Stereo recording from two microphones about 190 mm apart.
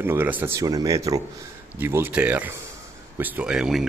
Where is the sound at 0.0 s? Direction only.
10° right (ahead or behind).